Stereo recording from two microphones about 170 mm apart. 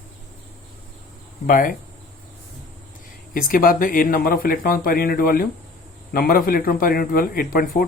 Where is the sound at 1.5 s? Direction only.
55° left (ahead or behind).